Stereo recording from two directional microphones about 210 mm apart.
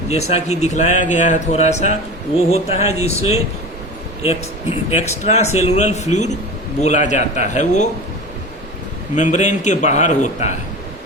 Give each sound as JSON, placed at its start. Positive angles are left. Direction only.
{"t": 0.1, "sound": "a man's voice", "side_deg": 30}
{"t": 9.1, "sound": "a man's voice", "side_deg": 35}